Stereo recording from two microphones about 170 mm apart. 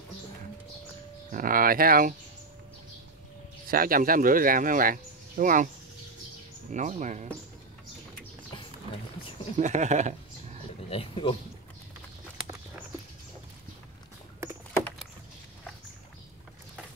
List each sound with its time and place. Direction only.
1.3 s speech: 55° right (ahead or behind)
3.6 s speech: 55° right (ahead or behind)
6.7 s speech: 45° right (ahead or behind)
8.5 s a sound: 30° left (ahead or behind)
9.6 s speech: 45° right (ahead or behind)
10.9 s speech: 30° left (ahead or behind)